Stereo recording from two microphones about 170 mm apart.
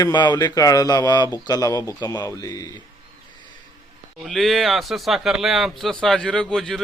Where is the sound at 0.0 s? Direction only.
25° left (ahead or behind).